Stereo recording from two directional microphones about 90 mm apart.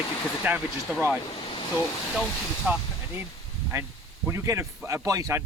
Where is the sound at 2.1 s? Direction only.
Centre (ahead or behind).